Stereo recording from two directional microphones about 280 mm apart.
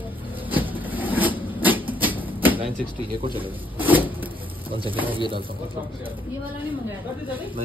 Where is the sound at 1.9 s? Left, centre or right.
Centre.